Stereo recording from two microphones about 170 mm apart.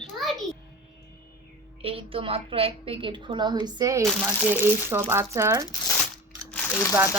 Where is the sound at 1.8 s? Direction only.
35° right (ahead or behind); by 5.6 s 15° right (ahead or behind).